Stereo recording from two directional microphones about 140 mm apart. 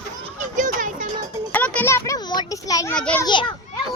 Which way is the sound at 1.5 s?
10° left (ahead or behind).